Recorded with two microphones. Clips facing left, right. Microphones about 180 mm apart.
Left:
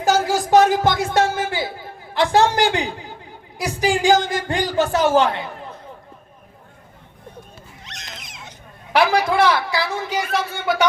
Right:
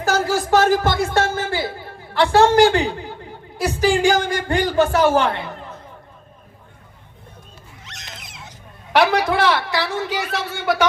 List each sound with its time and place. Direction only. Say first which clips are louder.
0.0 s music: left 1 dB; 20° left (ahead or behind)
2.1 s a man's voice: right 3 dB; 20° left (ahead or behind)
7.9 s a sound: left 1 dB; 20° left (ahead or behind)
9.0 s a man's voice: even; 75° right (ahead or behind)